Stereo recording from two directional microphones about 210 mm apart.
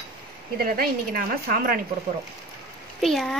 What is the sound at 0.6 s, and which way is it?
Speech, 45° right (ahead or behind).